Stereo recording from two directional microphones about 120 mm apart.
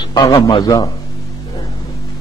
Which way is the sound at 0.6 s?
35° left (ahead or behind).